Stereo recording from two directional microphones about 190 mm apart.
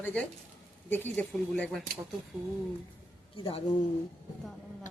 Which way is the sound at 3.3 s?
30° left (ahead or behind).